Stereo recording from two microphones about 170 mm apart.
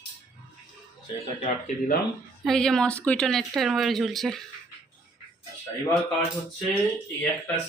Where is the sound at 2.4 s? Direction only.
5° left (ahead or behind).